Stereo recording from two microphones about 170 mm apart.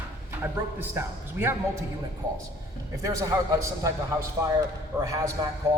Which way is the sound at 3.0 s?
20° right (ahead or behind).